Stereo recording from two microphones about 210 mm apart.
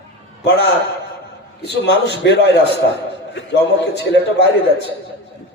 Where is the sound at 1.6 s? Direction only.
55° left (ahead or behind).